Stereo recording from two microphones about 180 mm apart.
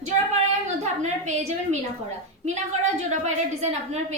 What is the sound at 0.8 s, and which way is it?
Speech, 40° right (ahead or behind).